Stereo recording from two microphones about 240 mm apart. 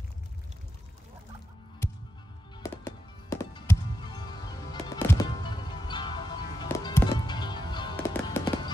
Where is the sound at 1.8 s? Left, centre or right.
Centre.